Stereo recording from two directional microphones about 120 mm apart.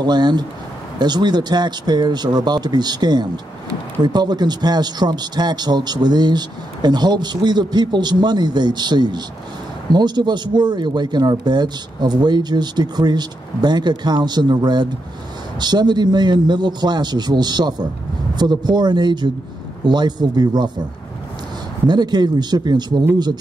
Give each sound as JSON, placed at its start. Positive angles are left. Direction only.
{"t": 0.0, "sound": "speech", "side_deg": -35}
{"t": 21.8, "sound": "speech", "side_deg": -35}